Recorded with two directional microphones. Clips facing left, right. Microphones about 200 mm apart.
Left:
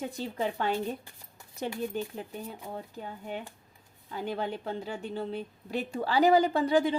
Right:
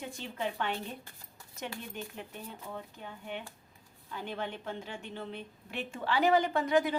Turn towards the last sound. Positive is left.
turn(degrees=30)  # may be behind; listen again after turning